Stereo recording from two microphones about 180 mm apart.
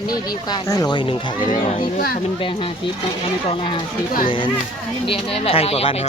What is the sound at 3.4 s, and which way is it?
Speech, 30° left (ahead or behind).